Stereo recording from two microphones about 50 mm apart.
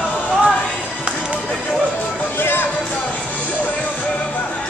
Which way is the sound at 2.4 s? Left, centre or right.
Left.